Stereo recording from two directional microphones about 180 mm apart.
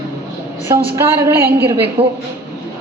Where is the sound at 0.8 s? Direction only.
15° right (ahead or behind).